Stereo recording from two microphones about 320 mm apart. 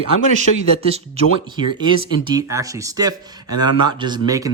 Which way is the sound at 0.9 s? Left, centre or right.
Centre.